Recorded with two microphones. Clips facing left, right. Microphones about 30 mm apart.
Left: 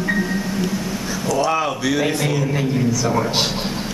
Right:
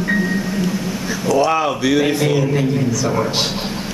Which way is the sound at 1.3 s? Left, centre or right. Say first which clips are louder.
Right 4 dB; centre.